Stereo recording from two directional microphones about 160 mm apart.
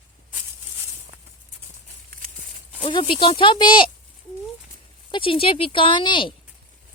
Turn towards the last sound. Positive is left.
turn(degrees=30)  # may be behind; listen again after turning